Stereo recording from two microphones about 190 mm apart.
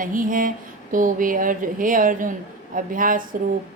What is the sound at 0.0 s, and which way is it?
A woman's voice, 45° right (ahead or behind).